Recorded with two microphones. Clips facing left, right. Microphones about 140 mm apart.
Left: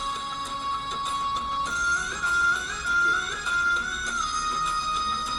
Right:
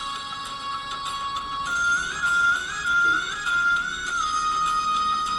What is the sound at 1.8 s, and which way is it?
Music, 35° left (ahead or behind).